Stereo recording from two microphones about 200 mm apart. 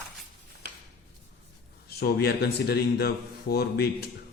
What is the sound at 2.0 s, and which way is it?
Speech, 55° left (ahead or behind).